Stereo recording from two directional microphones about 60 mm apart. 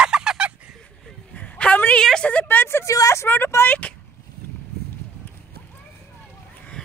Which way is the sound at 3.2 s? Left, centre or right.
Left.